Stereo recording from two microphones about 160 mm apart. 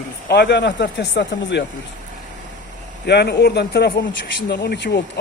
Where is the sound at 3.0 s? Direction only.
90° left.